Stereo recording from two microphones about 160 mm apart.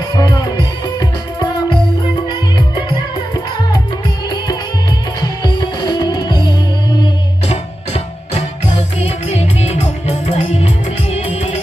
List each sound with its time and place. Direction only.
0.1 s music: 25° left (ahead or behind)
5.2 s music: 30° left (ahead or behind)
7.4 s music: 40° left (ahead or behind)